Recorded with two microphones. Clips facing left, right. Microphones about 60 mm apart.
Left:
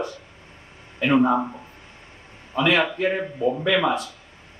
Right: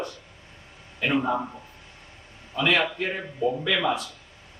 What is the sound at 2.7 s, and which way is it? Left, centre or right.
A man's voice, centre.